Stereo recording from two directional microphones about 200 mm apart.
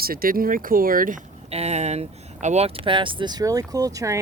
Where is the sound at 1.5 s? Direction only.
35° right (ahead or behind).